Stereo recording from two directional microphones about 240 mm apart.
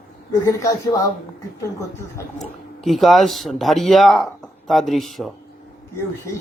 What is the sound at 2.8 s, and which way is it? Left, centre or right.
Speech, centre.